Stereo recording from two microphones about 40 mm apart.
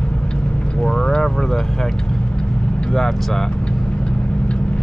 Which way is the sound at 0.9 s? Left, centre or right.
Centre.